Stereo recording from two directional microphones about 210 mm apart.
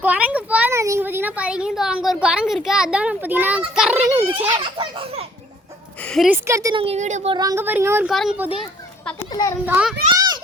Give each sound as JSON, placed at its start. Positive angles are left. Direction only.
{"t": 0.0, "sound": "a child's voice", "side_deg": -5}
{"t": 4.5, "sound": "a child's voice", "side_deg": -25}
{"t": 6.1, "sound": "speech", "side_deg": 0}
{"t": 6.8, "sound": "speech", "side_deg": -30}
{"t": 7.3, "sound": "speech", "side_deg": -15}
{"t": 9.3, "sound": "speech", "side_deg": 15}
{"t": 9.6, "sound": "speech", "side_deg": -5}
{"t": 10.2, "sound": "a sound", "side_deg": -20}